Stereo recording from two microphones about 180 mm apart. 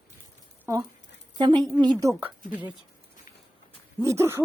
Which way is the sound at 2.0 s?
10° right (ahead or behind).